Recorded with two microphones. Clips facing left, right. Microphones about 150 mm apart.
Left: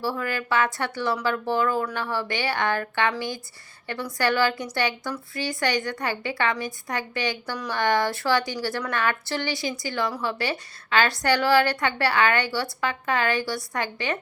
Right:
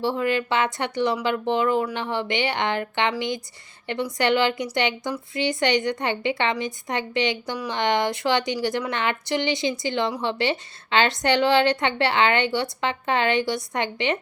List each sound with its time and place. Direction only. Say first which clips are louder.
0.0 s a woman's voice: right 5 dB; 20° right (ahead or behind)